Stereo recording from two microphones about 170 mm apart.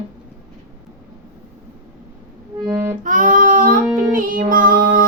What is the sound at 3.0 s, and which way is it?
Child singing, 50° right (ahead or behind).